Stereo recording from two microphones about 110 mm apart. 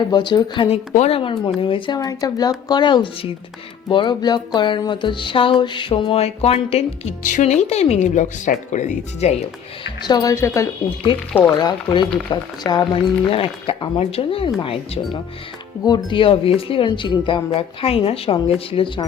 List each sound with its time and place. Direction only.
0.1 s speech: 40° left (ahead or behind)
0.7 s a woman's voice: 70° left (ahead or behind)
1.2 s speech: 50° left (ahead or behind); by 9.3 s 90° left
10.1 s speech: 35° left (ahead or behind)
11.1 s speech: 50° left (ahead or behind)
11.4 s speech: 35° left (ahead or behind)
12.9 s speech: 55° left (ahead or behind)
17.5 s speech: 60° left (ahead or behind)